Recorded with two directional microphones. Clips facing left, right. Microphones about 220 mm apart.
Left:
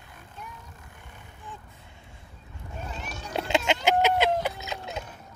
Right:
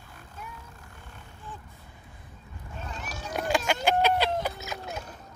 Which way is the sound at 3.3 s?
25° left (ahead or behind).